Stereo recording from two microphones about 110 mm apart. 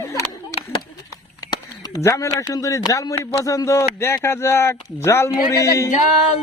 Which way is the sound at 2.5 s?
30° left (ahead or behind).